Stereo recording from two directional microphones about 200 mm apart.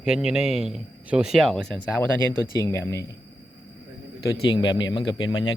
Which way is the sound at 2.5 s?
15° left (ahead or behind).